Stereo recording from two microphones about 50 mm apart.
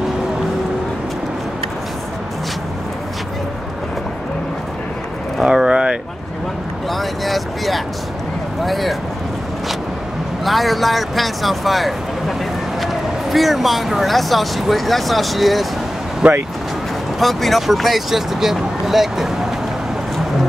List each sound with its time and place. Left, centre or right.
5.4 s vehicle: centre
5.7 s a sound: centre
6.9 s vehicle: centre
8.6 s speech: centre
10.4 s speech: centre
16.2 s speech: right
17.2 s speech: centre